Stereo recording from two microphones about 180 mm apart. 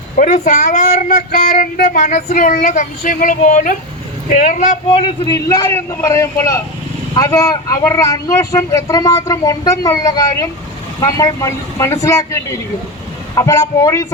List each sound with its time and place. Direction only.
0.2 s speech: 45° left (ahead or behind)
4.9 s a man's voice: 30° left (ahead or behind)